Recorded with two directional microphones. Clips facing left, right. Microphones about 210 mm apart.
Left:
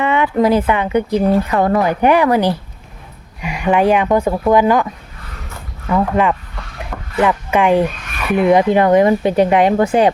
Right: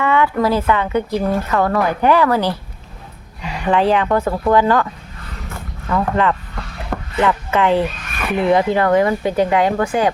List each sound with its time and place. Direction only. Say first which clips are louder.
0.0 s speech: left 2 dB; 20° left (ahead or behind)
5.9 s speech: left 2 dB; 15° left (ahead or behind)